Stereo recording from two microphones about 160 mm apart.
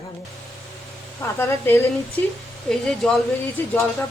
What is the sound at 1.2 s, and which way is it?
Speech, 15° left (ahead or behind).